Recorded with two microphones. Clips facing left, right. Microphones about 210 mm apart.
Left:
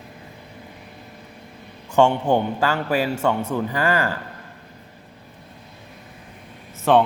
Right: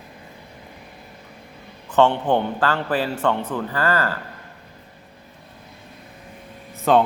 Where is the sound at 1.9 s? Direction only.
10° left (ahead or behind).